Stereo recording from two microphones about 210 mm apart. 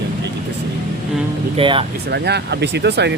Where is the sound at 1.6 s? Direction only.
25° right (ahead or behind).